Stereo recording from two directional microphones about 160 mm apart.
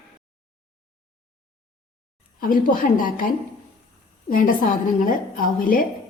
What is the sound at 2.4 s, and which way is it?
Speech, 55° left (ahead or behind).